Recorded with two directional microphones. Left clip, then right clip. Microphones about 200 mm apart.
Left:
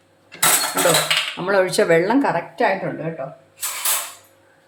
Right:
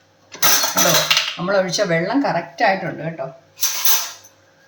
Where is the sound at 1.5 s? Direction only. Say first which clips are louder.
Left 4 dB; 45° left (ahead or behind).